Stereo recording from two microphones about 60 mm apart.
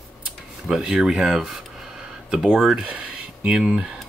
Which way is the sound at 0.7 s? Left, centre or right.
Centre.